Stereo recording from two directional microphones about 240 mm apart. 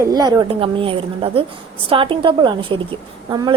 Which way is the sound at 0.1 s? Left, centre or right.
Centre.